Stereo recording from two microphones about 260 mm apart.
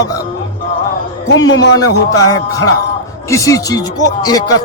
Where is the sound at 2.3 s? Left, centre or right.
Centre.